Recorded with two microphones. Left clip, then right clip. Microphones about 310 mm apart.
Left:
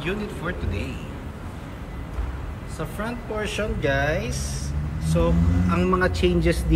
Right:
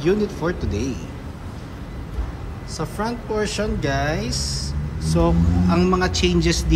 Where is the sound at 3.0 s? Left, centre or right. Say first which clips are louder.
Right 5 dB; centre.